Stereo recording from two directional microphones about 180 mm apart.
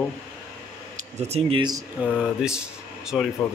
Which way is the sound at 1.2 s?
35° right (ahead or behind).